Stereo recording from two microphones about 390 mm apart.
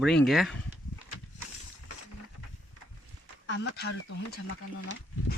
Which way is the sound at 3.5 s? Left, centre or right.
Left.